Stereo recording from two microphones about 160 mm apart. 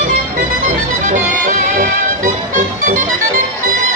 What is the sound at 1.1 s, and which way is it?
Music, 55° right (ahead or behind).